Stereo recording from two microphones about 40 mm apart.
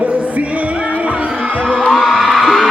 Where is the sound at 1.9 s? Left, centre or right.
Centre.